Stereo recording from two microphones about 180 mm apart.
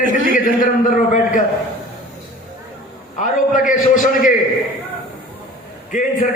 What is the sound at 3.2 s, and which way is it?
A man's voice, 45° left (ahead or behind).